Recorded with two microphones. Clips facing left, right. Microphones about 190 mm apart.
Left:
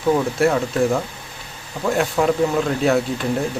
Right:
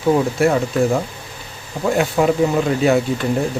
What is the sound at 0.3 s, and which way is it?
Speech, centre (ahead or behind).